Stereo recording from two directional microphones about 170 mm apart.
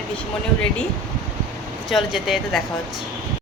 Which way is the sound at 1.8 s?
Centre (ahead or behind).